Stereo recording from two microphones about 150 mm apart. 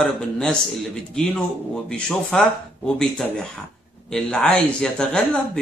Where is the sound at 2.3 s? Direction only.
5° left (ahead or behind).